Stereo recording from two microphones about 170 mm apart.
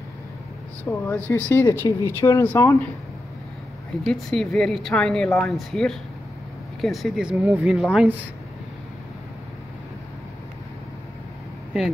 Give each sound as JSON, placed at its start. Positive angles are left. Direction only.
{"t": 0.8, "sound": "speech", "side_deg": 10}
{"t": 4.0, "sound": "speech", "side_deg": 5}